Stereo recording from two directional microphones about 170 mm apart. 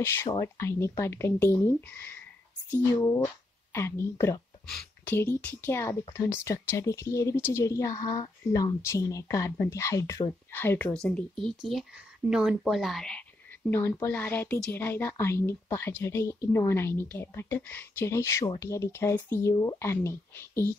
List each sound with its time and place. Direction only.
0.0 s speech: 15° left (ahead or behind)
13.7 s speech: 15° left (ahead or behind)